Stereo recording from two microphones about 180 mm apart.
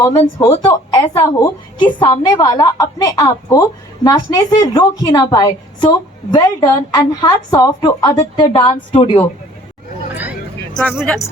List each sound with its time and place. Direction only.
0.3 s a woman's voice: 25° left (ahead or behind)
10.8 s speech: 5° left (ahead or behind)